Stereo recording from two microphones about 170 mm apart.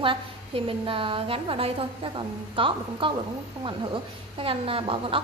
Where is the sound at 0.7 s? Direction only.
30° right (ahead or behind).